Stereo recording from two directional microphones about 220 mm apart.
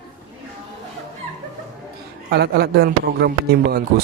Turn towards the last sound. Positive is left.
turn(degrees=-45)  # may be behind; listen again after turning